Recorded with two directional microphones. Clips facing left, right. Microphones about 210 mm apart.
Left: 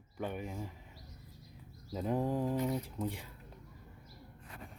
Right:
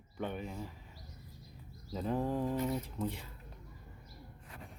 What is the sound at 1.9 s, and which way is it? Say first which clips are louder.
Speech: left 1 dB; 15° left (ahead or behind).